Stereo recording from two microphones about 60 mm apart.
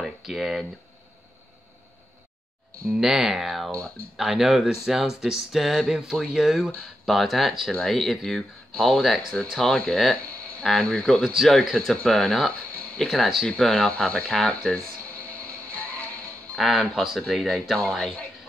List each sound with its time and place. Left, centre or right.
0.0 s speech: centre
2.9 s speech: centre
15.1 s music: left
16.5 s speech: centre